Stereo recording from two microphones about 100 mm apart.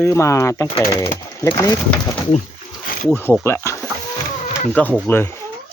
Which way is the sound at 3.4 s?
25° left (ahead or behind).